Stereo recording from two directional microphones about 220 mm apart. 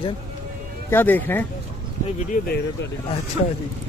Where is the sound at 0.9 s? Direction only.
10° left (ahead or behind).